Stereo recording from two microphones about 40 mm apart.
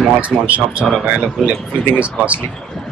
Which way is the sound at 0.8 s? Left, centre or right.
Centre.